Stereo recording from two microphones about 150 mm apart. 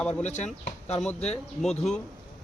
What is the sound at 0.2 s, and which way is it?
Speech, 50° left (ahead or behind).